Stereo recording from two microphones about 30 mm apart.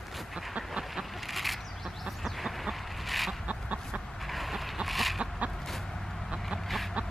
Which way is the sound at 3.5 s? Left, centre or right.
Right.